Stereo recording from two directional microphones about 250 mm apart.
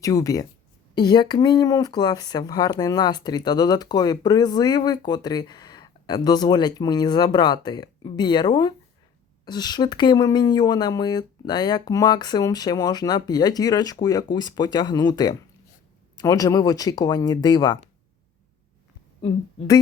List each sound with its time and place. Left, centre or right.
0.0 s speech: centre